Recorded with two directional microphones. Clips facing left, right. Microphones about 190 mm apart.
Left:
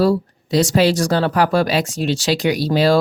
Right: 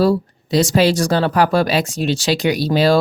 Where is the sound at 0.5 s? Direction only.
25° right (ahead or behind).